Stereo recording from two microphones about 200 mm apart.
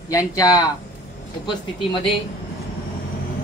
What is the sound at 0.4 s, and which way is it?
Speech, 20° left (ahead or behind).